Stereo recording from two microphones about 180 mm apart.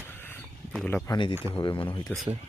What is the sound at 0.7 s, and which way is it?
Speech, 5° left (ahead or behind).